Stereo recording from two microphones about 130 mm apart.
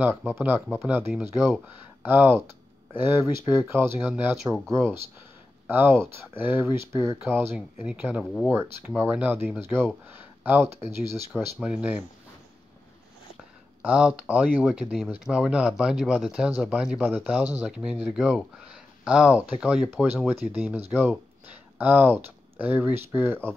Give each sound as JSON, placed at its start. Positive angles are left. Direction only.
{"t": 0.3, "sound": "speech", "side_deg": -10}
{"t": 10.0, "sound": "a sound", "side_deg": -15}
{"t": 11.1, "sound": "speech", "side_deg": -10}
{"t": 13.8, "sound": "speech", "side_deg": -10}